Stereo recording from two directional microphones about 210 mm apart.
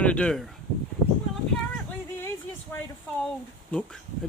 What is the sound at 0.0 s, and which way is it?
Speech, 5° left (ahead or behind).